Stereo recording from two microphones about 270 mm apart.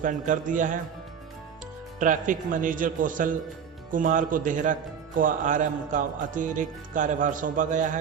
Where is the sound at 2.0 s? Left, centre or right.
Right.